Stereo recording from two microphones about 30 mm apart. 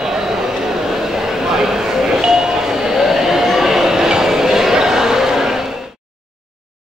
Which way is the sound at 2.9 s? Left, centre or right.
Centre.